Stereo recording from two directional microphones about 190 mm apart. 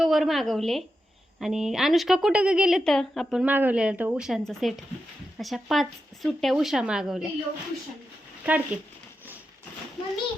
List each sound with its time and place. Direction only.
0.0 s a woman's voice: centre (ahead or behind)
8.4 s speech: 10° right (ahead or behind)